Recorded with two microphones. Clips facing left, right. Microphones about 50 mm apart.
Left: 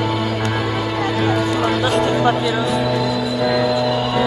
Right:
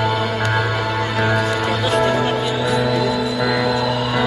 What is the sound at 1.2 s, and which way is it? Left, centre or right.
Music, right.